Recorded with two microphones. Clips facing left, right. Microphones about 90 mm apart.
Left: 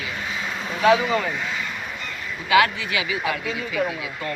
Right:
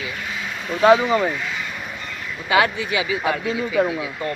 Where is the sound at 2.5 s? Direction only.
25° right (ahead or behind).